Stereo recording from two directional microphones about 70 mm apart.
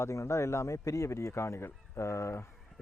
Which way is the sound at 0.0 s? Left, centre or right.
Left.